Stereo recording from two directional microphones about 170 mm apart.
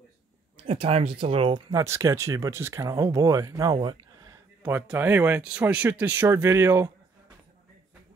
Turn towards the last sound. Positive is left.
turn(degrees=-15)  # may be behind; listen again after turning